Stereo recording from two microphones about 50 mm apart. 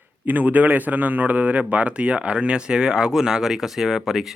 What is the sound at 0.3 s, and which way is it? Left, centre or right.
A man's voice, right.